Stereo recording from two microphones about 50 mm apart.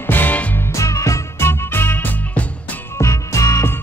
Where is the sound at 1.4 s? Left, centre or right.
Left.